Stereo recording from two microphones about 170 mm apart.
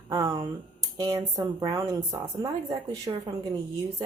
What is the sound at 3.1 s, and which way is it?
Speech, 25° right (ahead or behind).